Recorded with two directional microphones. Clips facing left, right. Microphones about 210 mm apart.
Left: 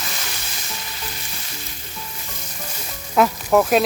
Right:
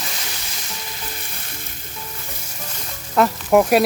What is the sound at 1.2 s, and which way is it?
Frying, 55° right (ahead or behind).